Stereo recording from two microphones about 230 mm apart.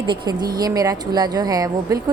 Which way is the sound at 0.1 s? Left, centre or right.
Centre.